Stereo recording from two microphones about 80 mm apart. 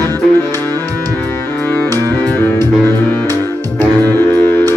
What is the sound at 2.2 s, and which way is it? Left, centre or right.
Music, left.